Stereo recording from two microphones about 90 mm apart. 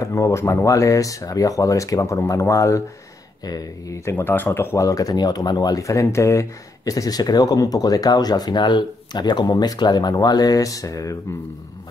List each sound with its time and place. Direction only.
0.0 s speech: 35° left (ahead or behind)
4.0 s speech: 25° left (ahead or behind)
4.7 s speech: 40° left (ahead or behind)